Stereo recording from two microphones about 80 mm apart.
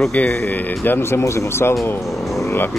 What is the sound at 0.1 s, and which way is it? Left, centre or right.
Speech, centre.